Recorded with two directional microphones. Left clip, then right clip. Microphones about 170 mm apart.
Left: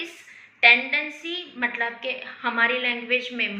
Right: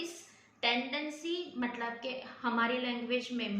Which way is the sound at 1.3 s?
30° right (ahead or behind).